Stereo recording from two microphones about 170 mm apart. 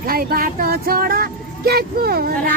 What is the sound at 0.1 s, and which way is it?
Speech, 60° right (ahead or behind).